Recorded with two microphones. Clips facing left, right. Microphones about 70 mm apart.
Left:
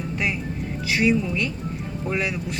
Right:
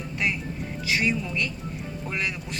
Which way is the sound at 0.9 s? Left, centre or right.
Centre.